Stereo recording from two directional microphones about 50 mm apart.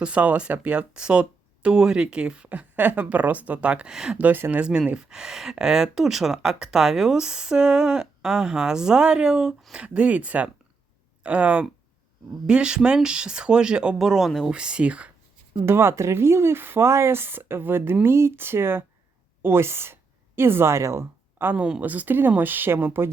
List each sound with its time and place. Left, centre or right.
0.0 s speech: right
2.5 s speech: right
3.9 s speech: centre
4.2 s speech: right
4.9 s speech: centre
14.5 s speech: centre
15.6 s a woman's voice: right
21.8 s speech: right